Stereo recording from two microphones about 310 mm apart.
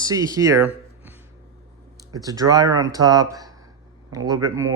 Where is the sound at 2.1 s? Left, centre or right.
Centre.